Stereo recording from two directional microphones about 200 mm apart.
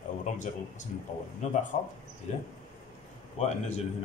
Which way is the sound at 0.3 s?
35° left (ahead or behind).